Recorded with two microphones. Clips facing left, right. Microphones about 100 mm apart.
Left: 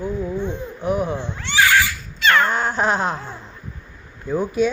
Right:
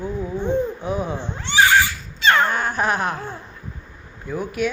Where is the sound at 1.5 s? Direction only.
25° right (ahead or behind).